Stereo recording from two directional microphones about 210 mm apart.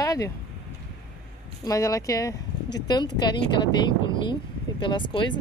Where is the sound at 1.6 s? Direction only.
15° left (ahead or behind).